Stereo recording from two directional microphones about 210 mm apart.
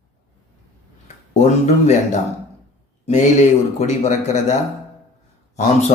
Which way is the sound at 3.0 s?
30° left (ahead or behind).